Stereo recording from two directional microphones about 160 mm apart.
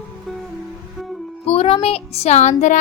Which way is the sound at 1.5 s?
40° left (ahead or behind).